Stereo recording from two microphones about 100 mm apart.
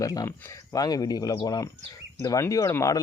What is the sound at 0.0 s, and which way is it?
Speech, 35° left (ahead or behind).